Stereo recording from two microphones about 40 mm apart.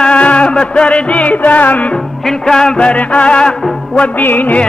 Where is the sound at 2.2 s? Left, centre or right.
Centre.